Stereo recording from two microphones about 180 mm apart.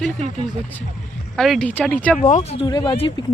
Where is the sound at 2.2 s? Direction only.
45° left (ahead or behind).